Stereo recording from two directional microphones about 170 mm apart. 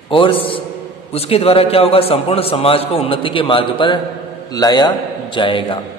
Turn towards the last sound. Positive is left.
turn(degrees=30)  # may be behind; listen again after turning